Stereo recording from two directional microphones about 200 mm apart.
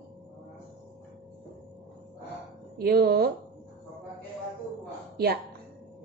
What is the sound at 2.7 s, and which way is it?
Speech, 50° right (ahead or behind).